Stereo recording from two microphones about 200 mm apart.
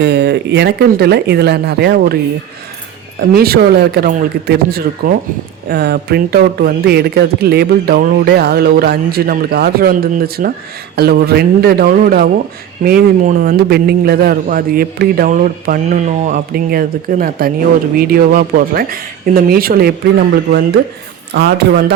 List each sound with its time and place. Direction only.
0.0 s speech: 60° right (ahead or behind)
3.2 s speech: 50° right (ahead or behind)